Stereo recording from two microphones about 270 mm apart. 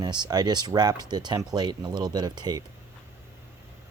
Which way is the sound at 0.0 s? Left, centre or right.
Centre.